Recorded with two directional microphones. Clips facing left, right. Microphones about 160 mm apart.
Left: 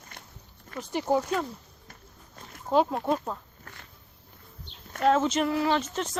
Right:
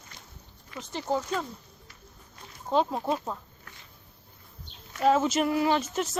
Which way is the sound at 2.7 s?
5° left (ahead or behind).